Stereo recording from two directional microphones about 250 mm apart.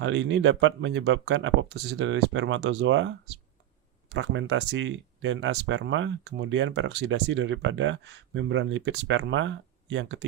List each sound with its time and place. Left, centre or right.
0.0 s speech: right